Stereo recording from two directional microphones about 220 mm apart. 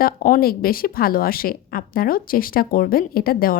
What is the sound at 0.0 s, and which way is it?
A woman's voice, 40° left (ahead or behind).